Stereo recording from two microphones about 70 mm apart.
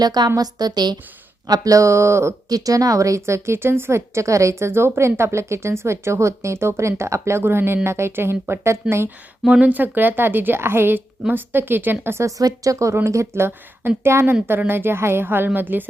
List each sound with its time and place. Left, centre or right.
0.0 s a woman's voice: right
1.5 s speech: right
2.5 s a woman's voice: right
9.5 s a woman's voice: centre
12.2 s a woman's voice: right